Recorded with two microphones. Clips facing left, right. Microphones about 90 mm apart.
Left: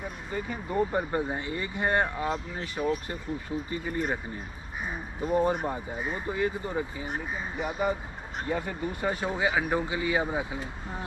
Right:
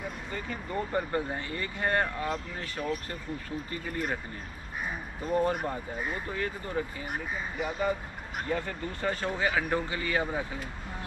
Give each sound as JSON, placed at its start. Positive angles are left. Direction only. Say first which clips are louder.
{"t": 0.3, "sound": "speech", "louder": "left 5 dB", "side_deg": 15}
{"t": 5.2, "sound": "speech", "louder": "left 2 dB", "side_deg": 10}
{"t": 8.5, "sound": "speech", "louder": "left 2 dB", "side_deg": 10}